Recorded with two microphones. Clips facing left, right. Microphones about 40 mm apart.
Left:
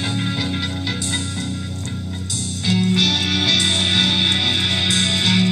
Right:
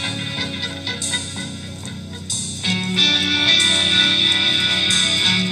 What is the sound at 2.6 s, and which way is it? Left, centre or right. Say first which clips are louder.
Music: left 1 dB; right.